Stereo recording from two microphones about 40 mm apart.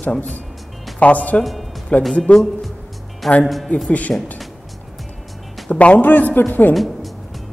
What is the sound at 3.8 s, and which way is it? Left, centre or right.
Speech, left.